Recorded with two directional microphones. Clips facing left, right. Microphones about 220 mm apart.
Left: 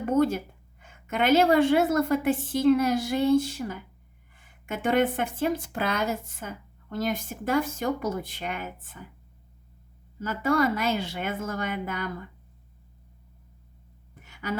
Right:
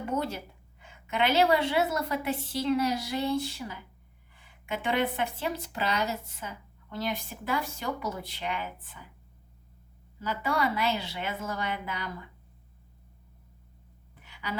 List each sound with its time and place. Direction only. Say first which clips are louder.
0.2 s a woman's voice: left 10 dB; 50° left (ahead or behind)
10.2 s a woman's voice: left 6 dB; 45° left (ahead or behind)
14.2 s a sound: left 4 dB; 45° left (ahead or behind)